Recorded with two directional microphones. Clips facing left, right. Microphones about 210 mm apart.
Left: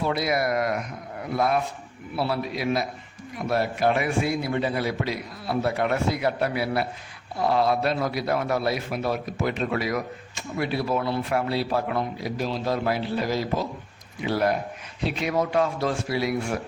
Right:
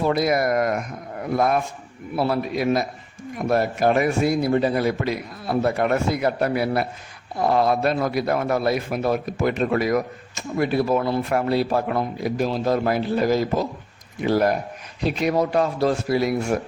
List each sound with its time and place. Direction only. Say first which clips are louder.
0.0 s a man's voice: right 4 dB; 45° right (ahead or behind)